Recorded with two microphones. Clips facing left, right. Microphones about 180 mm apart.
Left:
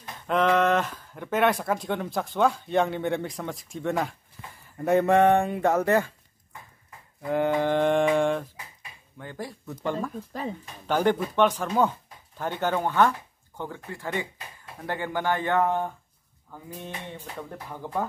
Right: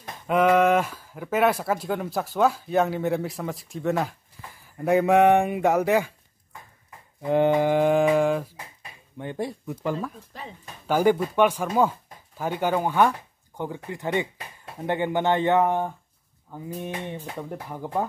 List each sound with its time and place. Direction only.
0.3 s speech: 10° right (ahead or behind)
5.1 s speech: 15° right (ahead or behind)
7.2 s speech: 20° right (ahead or behind)
9.2 s speech: 20° right (ahead or behind)
9.7 s speech: 5° right (ahead or behind)